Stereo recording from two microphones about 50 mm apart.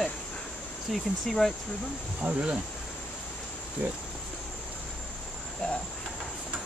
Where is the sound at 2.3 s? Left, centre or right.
Right.